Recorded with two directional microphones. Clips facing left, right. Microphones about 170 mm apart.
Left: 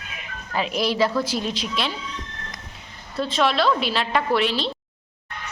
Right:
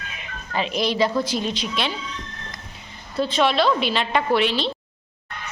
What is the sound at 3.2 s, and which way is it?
A woman's voice, centre (ahead or behind).